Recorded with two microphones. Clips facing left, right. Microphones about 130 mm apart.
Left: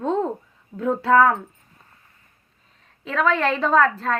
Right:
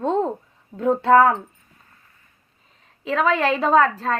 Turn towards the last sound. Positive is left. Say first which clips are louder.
# right 1 dB
turn(degrees=0)  # may be behind; listen again after turning